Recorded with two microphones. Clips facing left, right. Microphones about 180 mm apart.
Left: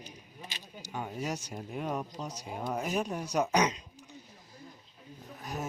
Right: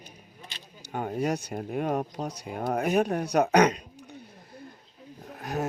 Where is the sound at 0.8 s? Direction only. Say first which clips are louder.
Right 8 dB; 55° right (ahead or behind).